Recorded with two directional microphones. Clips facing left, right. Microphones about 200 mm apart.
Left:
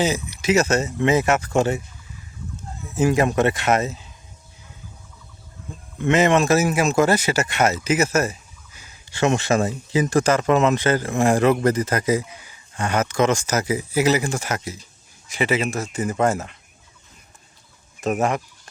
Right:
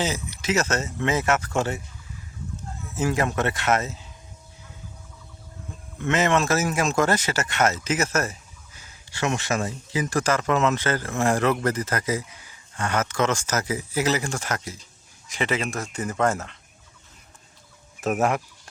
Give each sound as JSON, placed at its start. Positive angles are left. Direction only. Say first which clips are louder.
{"t": 0.0, "sound": "speech", "louder": "left 5 dB", "side_deg": 15}
{"t": 2.8, "sound": "speech", "louder": "left 6 dB", "side_deg": 15}
{"t": 6.0, "sound": "speech", "louder": "left 5 dB", "side_deg": 15}
{"t": 18.0, "sound": "speech", "louder": "left 1 dB", "side_deg": -5}